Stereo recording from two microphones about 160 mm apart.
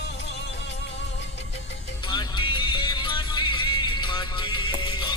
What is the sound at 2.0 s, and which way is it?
Music, 30° left (ahead or behind).